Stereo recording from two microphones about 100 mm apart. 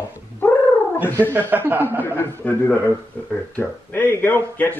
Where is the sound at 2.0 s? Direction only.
20° left (ahead or behind).